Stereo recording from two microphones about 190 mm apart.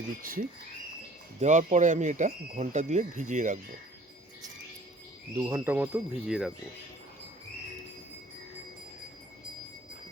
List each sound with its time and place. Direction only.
0.2 s speech: 45° right (ahead or behind)
5.4 s speech: 15° right (ahead or behind)